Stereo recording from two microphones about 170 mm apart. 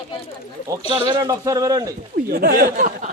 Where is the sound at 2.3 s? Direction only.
65° right (ahead or behind).